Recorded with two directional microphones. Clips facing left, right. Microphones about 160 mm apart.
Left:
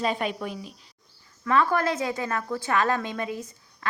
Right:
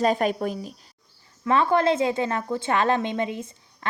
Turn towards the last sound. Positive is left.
turn(degrees=-25)  # may be behind; listen again after turning